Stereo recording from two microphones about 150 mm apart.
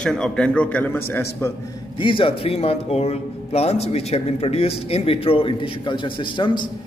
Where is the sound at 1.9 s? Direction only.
35° left (ahead or behind).